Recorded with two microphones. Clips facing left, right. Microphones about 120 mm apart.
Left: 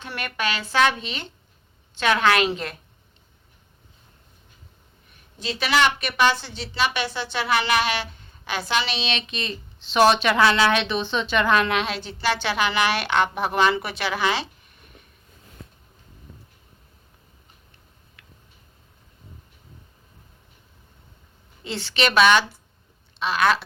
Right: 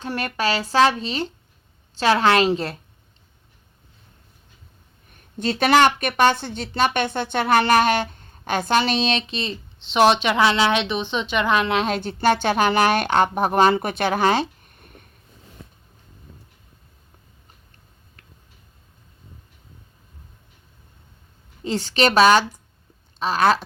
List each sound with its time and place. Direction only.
0.0 s speech: 40° right (ahead or behind)
5.4 s speech: 55° right (ahead or behind)
9.2 s speech: 30° right (ahead or behind)
11.7 s speech: 35° right (ahead or behind)
11.9 s speech: 50° right (ahead or behind)
21.6 s speech: 40° right (ahead or behind)